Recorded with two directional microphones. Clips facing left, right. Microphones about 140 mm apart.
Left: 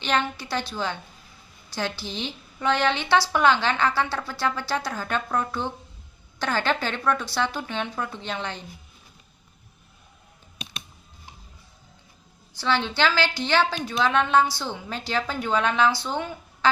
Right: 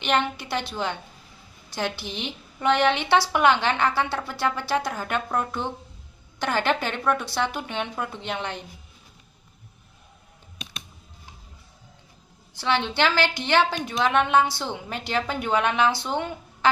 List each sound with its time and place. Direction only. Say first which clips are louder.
0.0 s a woman's voice: right 1 dB; 20° right (ahead or behind)
12.5 s a woman's voice: even; 20° right (ahead or behind)